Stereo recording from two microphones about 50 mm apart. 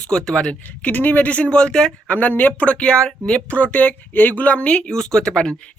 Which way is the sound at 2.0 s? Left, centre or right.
Left.